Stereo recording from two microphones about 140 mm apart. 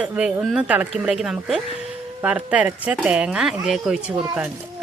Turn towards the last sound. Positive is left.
turn(degrees=-10)  # may be behind; listen again after turning